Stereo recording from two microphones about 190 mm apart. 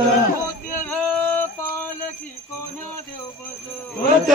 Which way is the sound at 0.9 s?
10° left (ahead or behind).